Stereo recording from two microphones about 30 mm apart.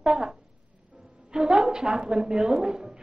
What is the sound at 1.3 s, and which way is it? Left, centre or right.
A woman's voice, right.